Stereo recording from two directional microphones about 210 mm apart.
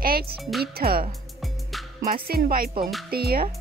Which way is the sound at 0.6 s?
45° right (ahead or behind).